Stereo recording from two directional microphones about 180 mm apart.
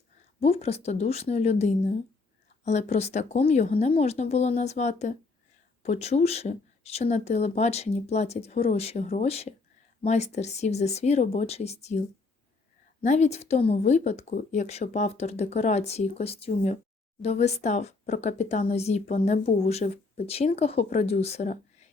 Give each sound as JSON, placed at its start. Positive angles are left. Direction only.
{"t": 0.3, "sound": "speech", "side_deg": 35}